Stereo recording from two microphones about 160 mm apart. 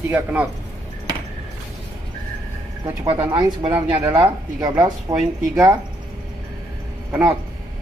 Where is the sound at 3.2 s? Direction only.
30° right (ahead or behind).